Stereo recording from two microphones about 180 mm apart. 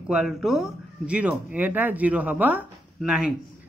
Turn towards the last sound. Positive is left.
turn(degrees=-5)  # may be behind; listen again after turning